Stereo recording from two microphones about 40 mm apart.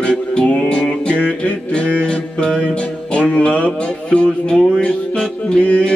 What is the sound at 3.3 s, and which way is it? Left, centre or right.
Music, left.